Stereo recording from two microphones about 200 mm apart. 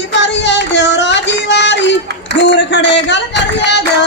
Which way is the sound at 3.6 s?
60° left (ahead or behind).